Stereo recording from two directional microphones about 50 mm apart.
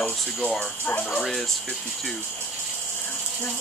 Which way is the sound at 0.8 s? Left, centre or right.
Left.